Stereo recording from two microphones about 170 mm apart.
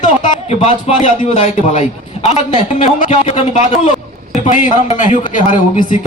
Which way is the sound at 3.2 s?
35° left (ahead or behind).